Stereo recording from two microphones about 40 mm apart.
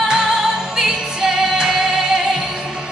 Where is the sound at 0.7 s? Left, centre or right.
Centre.